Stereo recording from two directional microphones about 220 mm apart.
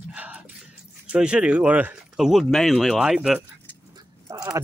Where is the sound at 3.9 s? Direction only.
15° right (ahead or behind).